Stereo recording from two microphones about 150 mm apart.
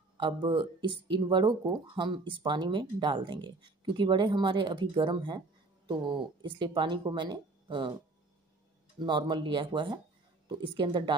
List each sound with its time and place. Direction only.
0.2 s speech: 30° right (ahead or behind)
9.0 s speech: 30° right (ahead or behind)